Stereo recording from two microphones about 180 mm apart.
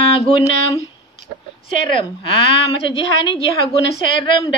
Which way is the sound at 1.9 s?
30° left (ahead or behind).